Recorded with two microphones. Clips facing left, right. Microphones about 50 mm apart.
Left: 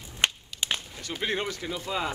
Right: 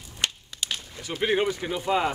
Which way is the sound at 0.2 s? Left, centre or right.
Left.